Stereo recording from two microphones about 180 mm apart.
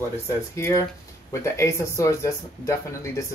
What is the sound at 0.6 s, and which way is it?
Speech, 15° left (ahead or behind).